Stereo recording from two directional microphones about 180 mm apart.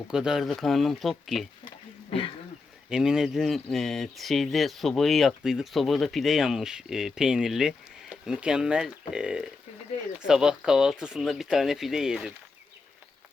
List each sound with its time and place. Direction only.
0.1 s speech: 5° right (ahead or behind)
1.6 s a sound: 30° left (ahead or behind)
2.9 s speech: 5° right (ahead or behind)